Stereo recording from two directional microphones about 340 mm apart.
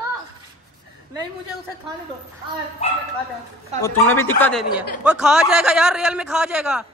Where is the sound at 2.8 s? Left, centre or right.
Centre.